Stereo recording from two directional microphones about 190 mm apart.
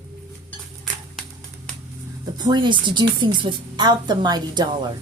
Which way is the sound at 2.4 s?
25° right (ahead or behind).